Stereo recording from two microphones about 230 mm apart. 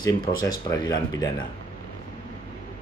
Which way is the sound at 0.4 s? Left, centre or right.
Centre.